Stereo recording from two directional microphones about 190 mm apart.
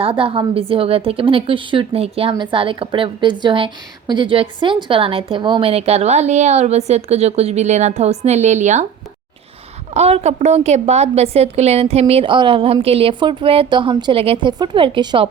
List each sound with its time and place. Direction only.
0.0 s a woman's voice: 30° right (ahead or behind)
9.9 s a woman's voice: 35° right (ahead or behind)